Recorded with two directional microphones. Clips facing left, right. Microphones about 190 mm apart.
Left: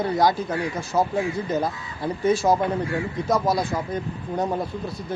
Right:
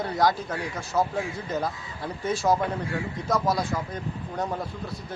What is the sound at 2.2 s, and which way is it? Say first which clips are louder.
A man's voice: left 4 dB; 10° left (ahead or behind).